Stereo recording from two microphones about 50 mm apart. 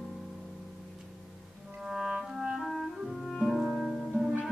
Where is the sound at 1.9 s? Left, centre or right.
Centre.